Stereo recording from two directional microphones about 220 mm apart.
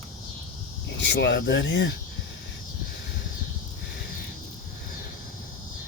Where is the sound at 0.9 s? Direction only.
50° left (ahead or behind).